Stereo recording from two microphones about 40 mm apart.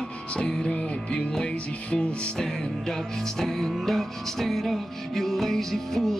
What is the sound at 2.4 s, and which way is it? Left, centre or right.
Music, centre.